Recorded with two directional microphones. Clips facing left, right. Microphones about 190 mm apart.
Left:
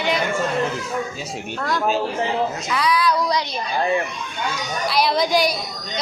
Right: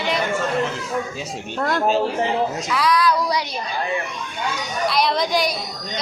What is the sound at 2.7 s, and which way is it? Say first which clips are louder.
Speech: right 1 dB; centre (ahead or behind).